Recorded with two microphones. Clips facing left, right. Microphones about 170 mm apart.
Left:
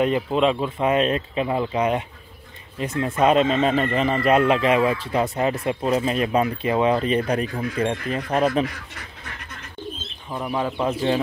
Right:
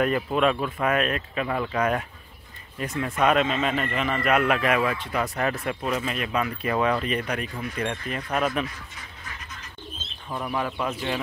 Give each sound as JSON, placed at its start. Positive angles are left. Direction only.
{"t": 0.0, "sound": "speech", "side_deg": 20}
{"t": 8.6, "sound": "duck", "side_deg": 70}
{"t": 10.5, "sound": "speech", "side_deg": 25}